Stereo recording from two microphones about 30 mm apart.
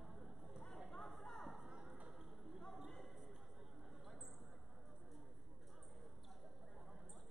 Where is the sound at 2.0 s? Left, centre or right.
Centre.